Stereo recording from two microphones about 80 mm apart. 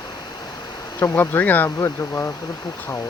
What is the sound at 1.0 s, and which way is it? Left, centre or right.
Speech, left.